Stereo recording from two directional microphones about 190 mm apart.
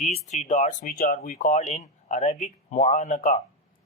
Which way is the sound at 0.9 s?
50° left (ahead or behind).